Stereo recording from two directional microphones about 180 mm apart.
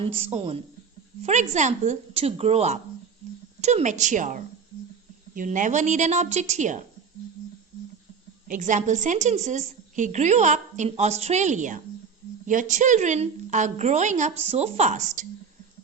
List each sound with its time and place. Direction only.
0.0 s a woman's voice: 35° right (ahead or behind)
8.4 s a woman's voice: 45° right (ahead or behind)